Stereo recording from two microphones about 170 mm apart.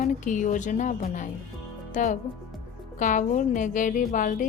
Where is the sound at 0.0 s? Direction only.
50° left (ahead or behind).